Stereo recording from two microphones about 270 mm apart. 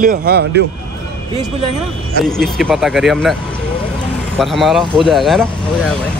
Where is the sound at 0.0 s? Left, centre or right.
Right.